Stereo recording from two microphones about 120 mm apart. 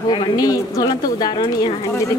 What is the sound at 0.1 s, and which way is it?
A woman's voice, 30° left (ahead or behind).